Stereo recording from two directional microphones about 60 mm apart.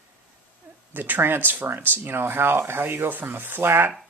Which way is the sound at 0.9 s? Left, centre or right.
Right.